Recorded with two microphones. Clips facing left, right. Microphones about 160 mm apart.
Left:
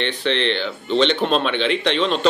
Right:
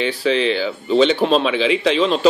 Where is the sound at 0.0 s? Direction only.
5° right (ahead or behind).